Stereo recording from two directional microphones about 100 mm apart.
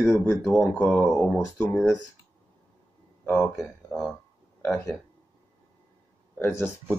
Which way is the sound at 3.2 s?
15° left (ahead or behind).